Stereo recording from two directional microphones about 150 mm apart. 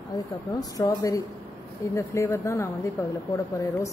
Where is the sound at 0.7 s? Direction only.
20° left (ahead or behind).